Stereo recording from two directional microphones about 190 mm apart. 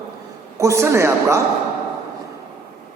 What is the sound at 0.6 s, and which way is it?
Speech, 15° right (ahead or behind).